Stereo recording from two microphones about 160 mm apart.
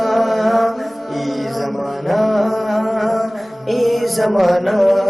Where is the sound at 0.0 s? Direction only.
Centre (ahead or behind).